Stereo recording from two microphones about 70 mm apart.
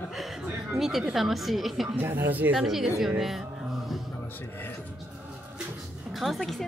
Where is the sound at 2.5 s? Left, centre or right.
Centre.